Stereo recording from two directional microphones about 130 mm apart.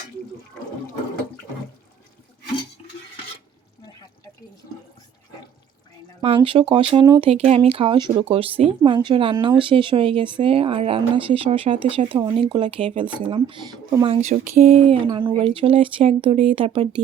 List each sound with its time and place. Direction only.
6.2 s speech: 45° right (ahead or behind)
7.3 s speech: 55° right (ahead or behind); by 8.2 s 35° right (ahead or behind)
8.2 s speech: 45° right (ahead or behind)
14.2 s a sound: 80° right
14.8 s speech: 40° right (ahead or behind)